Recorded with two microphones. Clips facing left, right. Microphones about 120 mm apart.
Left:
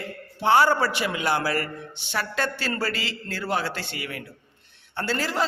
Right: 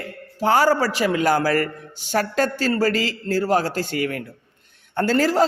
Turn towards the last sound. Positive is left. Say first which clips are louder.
# right 8 dB
turn(degrees=-40)  # may be behind; listen again after turning